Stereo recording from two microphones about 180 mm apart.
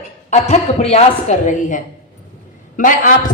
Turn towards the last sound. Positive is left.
turn(degrees=50)  # may be behind; listen again after turning